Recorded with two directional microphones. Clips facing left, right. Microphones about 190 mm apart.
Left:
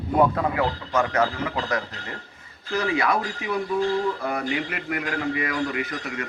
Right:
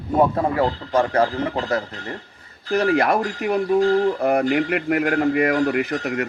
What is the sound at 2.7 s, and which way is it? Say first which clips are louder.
A man's voice: right 5 dB; 55° right (ahead or behind).